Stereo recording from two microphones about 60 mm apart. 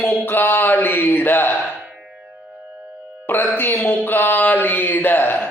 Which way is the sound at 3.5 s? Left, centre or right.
Left.